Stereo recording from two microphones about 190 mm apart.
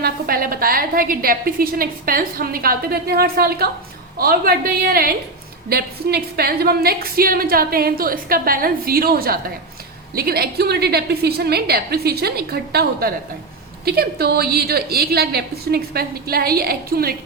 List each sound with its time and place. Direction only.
0.0 s a woman's voice: 50° right (ahead or behind)